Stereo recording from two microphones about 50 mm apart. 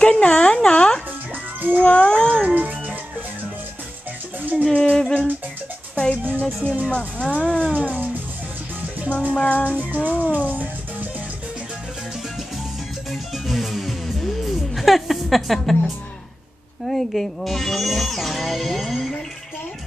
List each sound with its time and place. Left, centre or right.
0.0 s a woman's voice: centre
0.7 s music: centre
1.8 s cat: left
2.3 s music: right
4.4 s music: right
4.6 s music: centre
6.6 s music: right
6.9 s speech: left
9.1 s speech: left
10.2 s music: right
13.1 s music: centre
16.8 s speech: centre